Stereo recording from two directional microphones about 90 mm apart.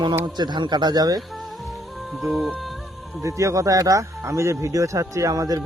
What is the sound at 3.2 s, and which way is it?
Speech, 35° right (ahead or behind).